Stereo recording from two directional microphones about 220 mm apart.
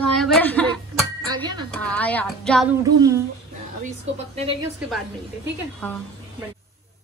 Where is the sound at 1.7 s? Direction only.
5° left (ahead or behind).